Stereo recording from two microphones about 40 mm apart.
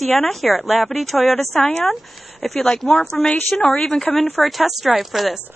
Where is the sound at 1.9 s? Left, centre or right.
Centre.